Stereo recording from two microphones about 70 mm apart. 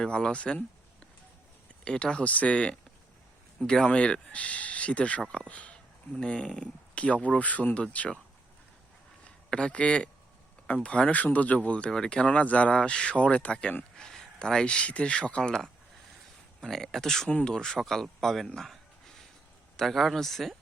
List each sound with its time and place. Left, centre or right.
0.0 s speech: centre
9.2 s speech: centre